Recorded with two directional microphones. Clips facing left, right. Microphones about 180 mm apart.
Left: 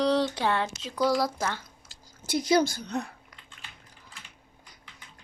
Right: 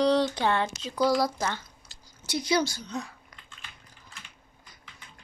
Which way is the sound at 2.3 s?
50° left (ahead or behind).